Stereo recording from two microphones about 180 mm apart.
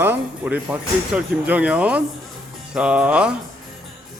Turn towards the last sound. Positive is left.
turn(degrees=-5)  # may be behind; listen again after turning